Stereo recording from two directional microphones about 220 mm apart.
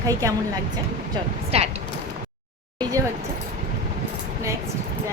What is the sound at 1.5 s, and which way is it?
Speech, 30° right (ahead or behind).